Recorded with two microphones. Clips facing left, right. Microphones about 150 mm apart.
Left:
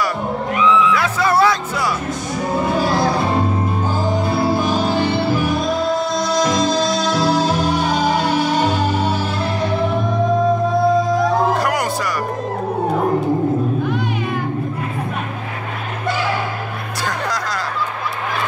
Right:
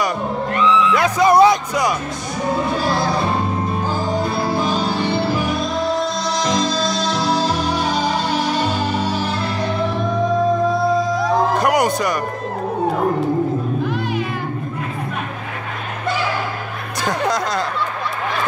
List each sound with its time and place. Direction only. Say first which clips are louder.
0.6 s music: left 1 dB; centre (ahead or behind)
0.9 s speech: right 4 dB; 15° right (ahead or behind)
11.6 s music: right 3 dB; 20° right (ahead or behind)